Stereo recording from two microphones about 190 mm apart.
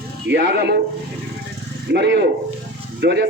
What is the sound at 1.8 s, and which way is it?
Speech, 65° right (ahead or behind).